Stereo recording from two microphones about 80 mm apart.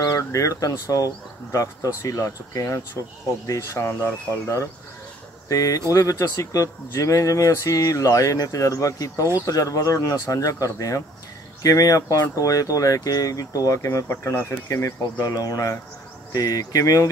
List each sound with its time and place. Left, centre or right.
0.0 s speech: left